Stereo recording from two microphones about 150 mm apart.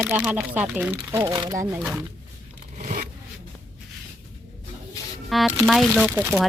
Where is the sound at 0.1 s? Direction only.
10° right (ahead or behind).